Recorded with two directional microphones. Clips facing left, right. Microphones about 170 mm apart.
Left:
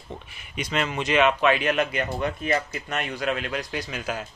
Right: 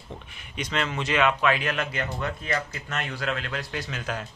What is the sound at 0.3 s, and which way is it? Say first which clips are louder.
Speech: left 2 dB; 10° left (ahead or behind).